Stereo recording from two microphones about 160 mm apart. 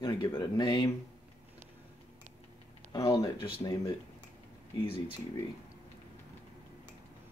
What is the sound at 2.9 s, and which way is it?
Speech, 20° left (ahead or behind).